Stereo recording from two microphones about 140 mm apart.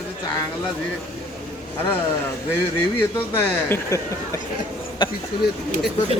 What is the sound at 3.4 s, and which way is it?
Speech, 20° left (ahead or behind).